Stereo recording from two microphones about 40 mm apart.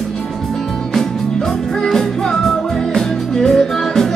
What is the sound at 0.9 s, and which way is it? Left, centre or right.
Music, centre.